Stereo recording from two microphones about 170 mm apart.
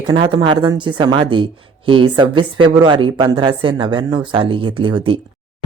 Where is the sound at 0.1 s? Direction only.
25° right (ahead or behind).